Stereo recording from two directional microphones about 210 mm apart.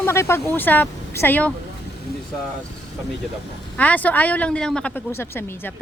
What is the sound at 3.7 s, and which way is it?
Speech, 10° left (ahead or behind).